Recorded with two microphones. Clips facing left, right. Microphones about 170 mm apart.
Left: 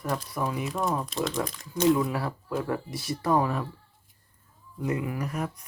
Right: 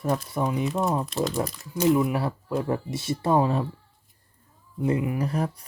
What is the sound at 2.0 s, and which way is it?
Speech, 20° right (ahead or behind).